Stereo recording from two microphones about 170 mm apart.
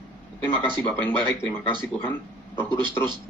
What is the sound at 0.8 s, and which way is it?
Speech, 10° left (ahead or behind).